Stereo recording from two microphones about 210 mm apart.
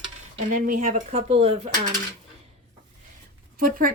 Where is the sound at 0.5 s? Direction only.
40° right (ahead or behind).